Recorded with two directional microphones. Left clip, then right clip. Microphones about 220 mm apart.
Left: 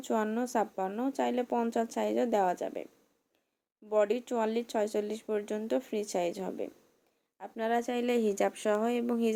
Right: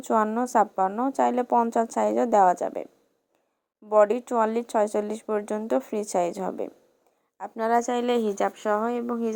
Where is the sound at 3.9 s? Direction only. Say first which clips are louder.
Right 8 dB; 25° right (ahead or behind).